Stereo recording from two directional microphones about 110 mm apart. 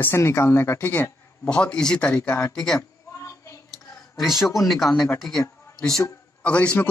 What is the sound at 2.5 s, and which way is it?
Speech, 5° left (ahead or behind).